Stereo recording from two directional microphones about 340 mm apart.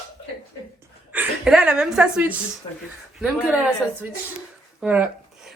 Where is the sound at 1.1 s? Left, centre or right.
Centre.